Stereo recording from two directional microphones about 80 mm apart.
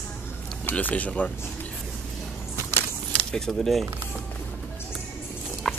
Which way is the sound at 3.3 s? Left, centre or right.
Centre.